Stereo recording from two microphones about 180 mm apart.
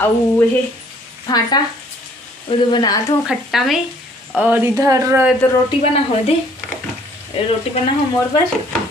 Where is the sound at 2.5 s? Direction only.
25° left (ahead or behind).